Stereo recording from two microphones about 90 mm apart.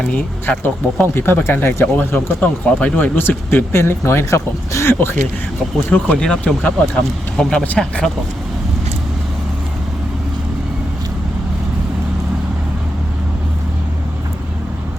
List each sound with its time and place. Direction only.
0.6 s speech: 25° left (ahead or behind)
3.2 s speech: 25° left (ahead or behind)
5.9 s speech: 10° left (ahead or behind)